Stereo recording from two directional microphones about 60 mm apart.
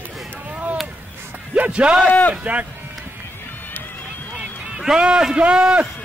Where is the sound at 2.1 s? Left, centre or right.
Left.